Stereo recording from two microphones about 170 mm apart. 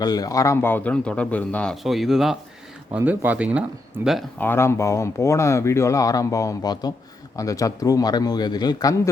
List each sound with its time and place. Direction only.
0.0 s speech: 20° left (ahead or behind); by 4.2 s 5° right (ahead or behind)
4.4 s speech: 15° left (ahead or behind)